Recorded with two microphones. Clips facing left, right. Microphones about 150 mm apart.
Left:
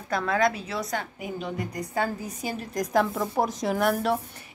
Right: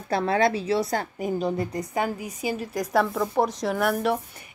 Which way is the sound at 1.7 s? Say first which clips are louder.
Right 2 dB; 20° right (ahead or behind).